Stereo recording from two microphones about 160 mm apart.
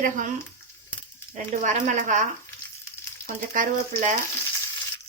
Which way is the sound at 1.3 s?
50° right (ahead or behind).